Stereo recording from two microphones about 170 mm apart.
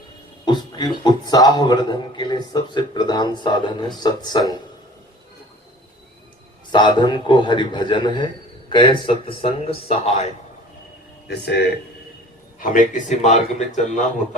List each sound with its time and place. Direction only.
0.4 s a man's voice: 25° left (ahead or behind)
6.7 s a man's voice: 25° left (ahead or behind)
11.3 s speech: 75° left (ahead or behind)
12.9 s speech: 45° left (ahead or behind)